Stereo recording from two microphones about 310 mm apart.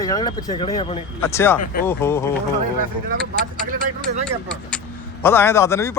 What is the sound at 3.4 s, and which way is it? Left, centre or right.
Speech, right.